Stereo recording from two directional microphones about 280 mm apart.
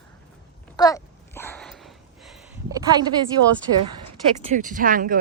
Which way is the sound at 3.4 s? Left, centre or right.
Right.